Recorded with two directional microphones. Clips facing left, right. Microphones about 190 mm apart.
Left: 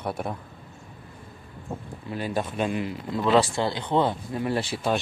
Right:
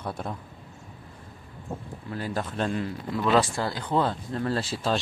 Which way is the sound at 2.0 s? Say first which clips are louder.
Left 3 dB; 20° left (ahead or behind).